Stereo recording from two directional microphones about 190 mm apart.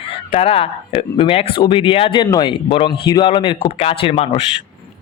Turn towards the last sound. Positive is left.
turn(degrees=30)  # may be behind; listen again after turning